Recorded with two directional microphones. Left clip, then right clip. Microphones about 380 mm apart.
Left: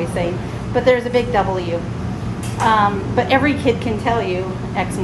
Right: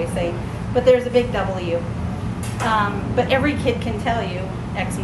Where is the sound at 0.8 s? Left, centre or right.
Left.